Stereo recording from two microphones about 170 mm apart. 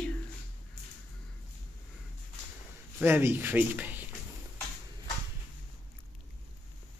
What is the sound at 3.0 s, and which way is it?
Speech, 15° right (ahead or behind).